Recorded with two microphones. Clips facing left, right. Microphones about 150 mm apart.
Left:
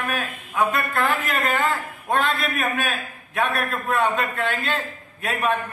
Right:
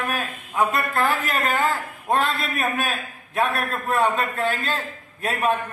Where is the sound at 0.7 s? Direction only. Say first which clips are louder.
Even; 35° right (ahead or behind).